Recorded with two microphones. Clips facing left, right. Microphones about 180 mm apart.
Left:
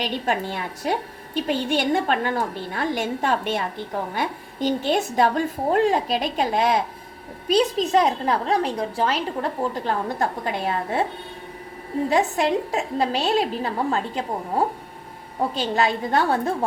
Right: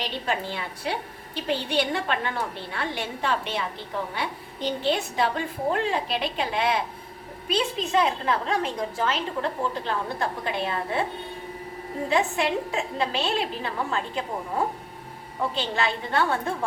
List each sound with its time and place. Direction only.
0.0 s a woman's voice: 50° left (ahead or behind)
12.1 s a woman's voice: 40° left (ahead or behind)
15.5 s a woman's voice: 40° left (ahead or behind)